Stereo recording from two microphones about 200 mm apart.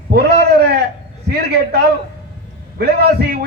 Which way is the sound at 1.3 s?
55° right (ahead or behind).